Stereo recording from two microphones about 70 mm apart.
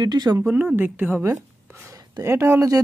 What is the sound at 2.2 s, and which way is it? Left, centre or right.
Speech, right.